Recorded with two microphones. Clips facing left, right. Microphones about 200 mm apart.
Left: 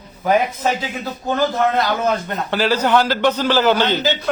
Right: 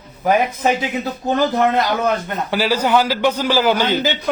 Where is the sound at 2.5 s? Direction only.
10° right (ahead or behind).